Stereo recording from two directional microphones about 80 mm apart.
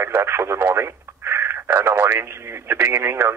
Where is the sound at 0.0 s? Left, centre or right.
Right.